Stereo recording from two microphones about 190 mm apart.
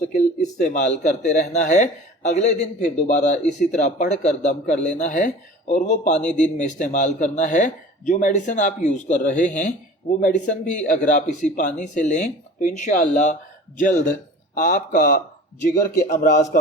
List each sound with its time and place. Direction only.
0.6 s speech: 40° left (ahead or behind)
6.1 s speech: 5° left (ahead or behind)
6.4 s speech: 40° left (ahead or behind)